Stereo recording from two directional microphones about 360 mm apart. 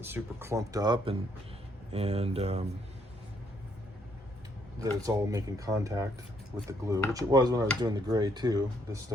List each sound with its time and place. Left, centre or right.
0.0 s speech: centre
4.8 s speech: centre